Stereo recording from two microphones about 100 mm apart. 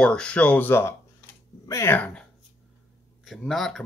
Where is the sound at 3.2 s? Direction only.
Centre (ahead or behind).